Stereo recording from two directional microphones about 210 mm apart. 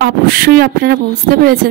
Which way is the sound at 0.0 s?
45° right (ahead or behind).